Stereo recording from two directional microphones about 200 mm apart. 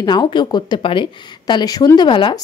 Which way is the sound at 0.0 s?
20° left (ahead or behind).